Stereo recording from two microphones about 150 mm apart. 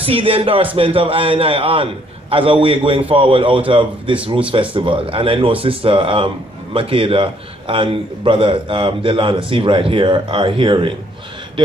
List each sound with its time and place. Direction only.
0.0 s speech: 40° right (ahead or behind)